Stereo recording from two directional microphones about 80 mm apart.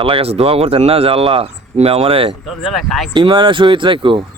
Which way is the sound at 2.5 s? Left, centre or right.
Centre.